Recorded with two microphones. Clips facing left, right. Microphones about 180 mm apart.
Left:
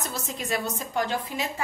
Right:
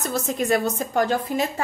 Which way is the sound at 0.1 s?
50° right (ahead or behind).